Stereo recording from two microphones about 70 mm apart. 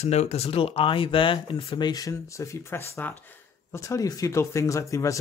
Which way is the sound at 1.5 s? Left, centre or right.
Left.